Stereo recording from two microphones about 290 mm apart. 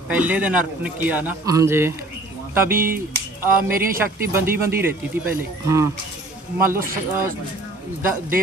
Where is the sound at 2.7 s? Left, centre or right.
Right.